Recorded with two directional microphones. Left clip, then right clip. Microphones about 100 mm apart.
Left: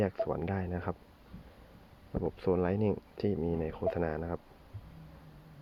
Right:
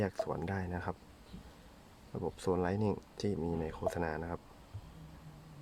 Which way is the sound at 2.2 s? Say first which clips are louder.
Left 3 dB; centre (ahead or behind).